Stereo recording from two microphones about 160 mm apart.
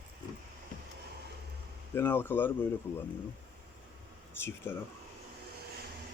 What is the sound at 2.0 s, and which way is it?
Speech, 15° left (ahead or behind).